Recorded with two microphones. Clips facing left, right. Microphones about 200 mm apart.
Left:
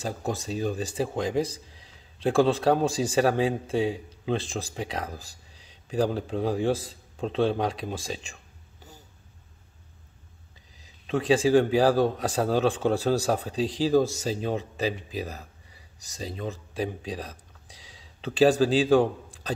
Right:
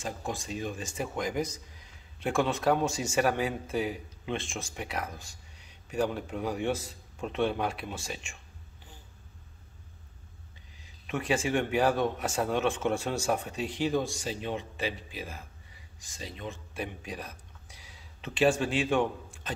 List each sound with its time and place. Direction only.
0.0 s speech: 40° left (ahead or behind)
10.8 s speech: 30° left (ahead or behind)